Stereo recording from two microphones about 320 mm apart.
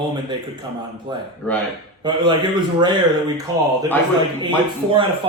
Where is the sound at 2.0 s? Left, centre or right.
Centre.